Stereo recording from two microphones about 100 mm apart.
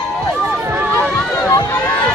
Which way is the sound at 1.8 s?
15° left (ahead or behind).